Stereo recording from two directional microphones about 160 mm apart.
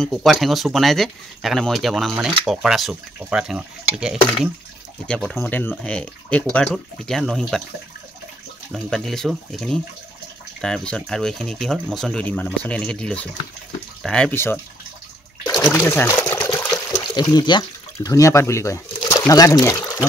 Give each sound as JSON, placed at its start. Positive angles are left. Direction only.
{"t": 0.0, "sound": "speech", "side_deg": 0}
{"t": 8.7, "sound": "speech", "side_deg": 5}
{"t": 15.7, "sound": "speech", "side_deg": 15}
{"t": 16.4, "sound": "water", "side_deg": 25}
{"t": 16.9, "sound": "speech", "side_deg": 25}